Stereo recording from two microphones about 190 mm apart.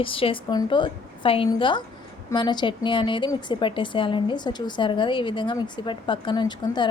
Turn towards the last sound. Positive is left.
turn(degrees=25)  # may be behind; listen again after turning